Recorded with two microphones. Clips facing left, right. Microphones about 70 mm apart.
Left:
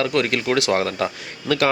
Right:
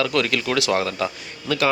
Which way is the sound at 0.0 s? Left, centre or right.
Left.